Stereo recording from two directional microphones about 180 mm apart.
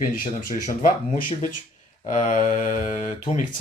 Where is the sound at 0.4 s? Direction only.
45° left (ahead or behind).